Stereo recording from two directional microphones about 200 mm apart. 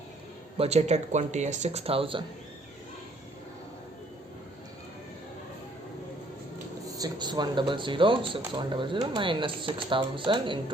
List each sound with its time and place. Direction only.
0.5 s speech: 30° right (ahead or behind)
6.9 s speech: 20° right (ahead or behind)